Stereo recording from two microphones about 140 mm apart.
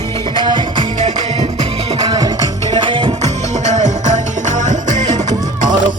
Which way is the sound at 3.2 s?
55° right (ahead or behind).